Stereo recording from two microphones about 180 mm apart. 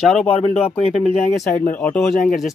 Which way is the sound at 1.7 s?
10° left (ahead or behind).